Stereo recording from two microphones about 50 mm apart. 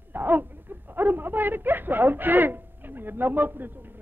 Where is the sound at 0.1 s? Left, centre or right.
Right.